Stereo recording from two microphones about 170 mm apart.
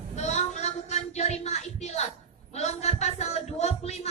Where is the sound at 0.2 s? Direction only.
45° left (ahead or behind).